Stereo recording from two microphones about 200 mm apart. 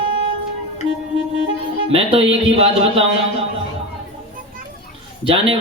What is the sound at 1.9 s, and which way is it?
A man's voice, 30° right (ahead or behind).